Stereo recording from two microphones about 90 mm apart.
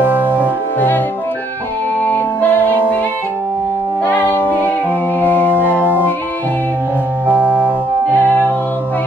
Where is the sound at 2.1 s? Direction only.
20° left (ahead or behind).